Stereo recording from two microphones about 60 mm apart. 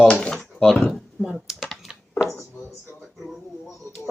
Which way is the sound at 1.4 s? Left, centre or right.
Centre.